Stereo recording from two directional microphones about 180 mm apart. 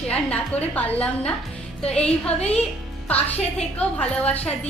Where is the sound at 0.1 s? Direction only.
5° left (ahead or behind).